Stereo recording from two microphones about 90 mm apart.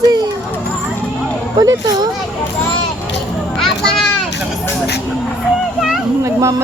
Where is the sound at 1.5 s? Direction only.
50° right (ahead or behind).